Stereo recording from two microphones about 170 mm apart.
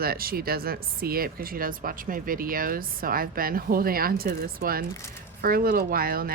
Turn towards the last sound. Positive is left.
turn(degrees=-60)  # may be behind; listen again after turning